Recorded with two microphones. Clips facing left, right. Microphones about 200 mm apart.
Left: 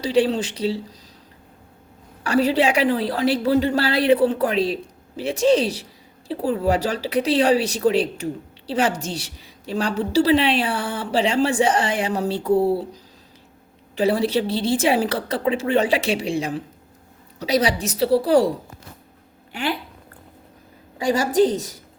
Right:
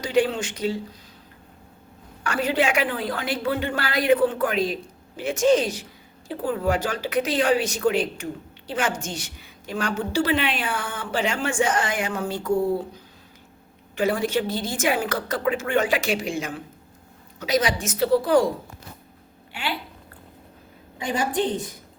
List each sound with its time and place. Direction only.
0.0 s speech: 35° left (ahead or behind)
2.2 s speech: 35° left (ahead or behind)
13.9 s speech: 35° left (ahead or behind)
21.5 s a woman's voice: 90° left